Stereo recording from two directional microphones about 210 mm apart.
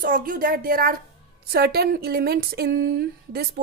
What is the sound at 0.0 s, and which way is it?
A woman's voice, 40° right (ahead or behind).